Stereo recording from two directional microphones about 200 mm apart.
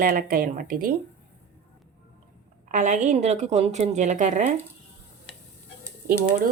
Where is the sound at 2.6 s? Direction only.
40° right (ahead or behind).